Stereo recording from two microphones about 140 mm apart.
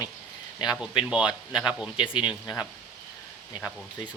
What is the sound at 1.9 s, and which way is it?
Speech, 35° left (ahead or behind).